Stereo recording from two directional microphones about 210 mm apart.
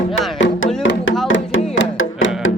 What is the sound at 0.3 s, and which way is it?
Music, 60° left (ahead or behind).